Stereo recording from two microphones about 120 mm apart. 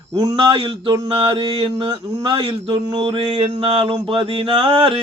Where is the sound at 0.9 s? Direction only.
40° right (ahead or behind).